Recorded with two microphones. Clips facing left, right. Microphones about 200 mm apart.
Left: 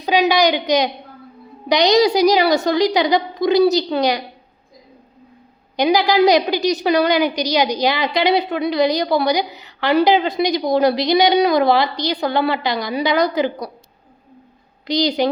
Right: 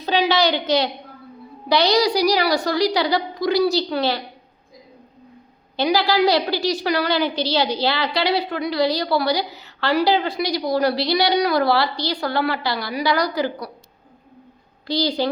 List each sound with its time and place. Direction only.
0.0 s a woman's voice: 15° left (ahead or behind)
5.7 s a woman's voice: 15° left (ahead or behind)
14.8 s a woman's voice: 20° left (ahead or behind)